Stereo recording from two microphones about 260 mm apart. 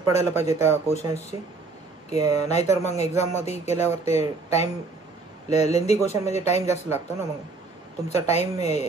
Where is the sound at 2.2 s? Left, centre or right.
Left.